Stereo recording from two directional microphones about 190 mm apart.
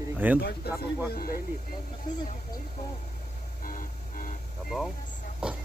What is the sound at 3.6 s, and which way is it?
Music, 45° left (ahead or behind).